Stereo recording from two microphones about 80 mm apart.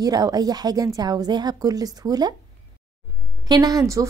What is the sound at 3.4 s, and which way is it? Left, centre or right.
Speech, right.